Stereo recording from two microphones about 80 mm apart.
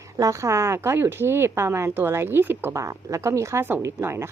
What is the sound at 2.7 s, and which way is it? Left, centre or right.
Speech, right.